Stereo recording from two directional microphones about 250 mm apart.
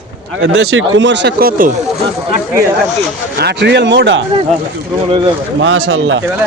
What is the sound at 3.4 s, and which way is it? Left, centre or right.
Speech, right.